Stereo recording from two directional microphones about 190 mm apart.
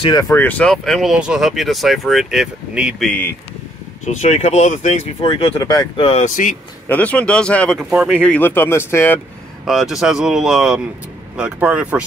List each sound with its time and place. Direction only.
0.0 s speech: 20° left (ahead or behind)
4.0 s speech: 40° left (ahead or behind)
6.2 s speech: 45° left (ahead or behind)
6.9 s speech: 5° left (ahead or behind)
9.7 s speech: centre (ahead or behind)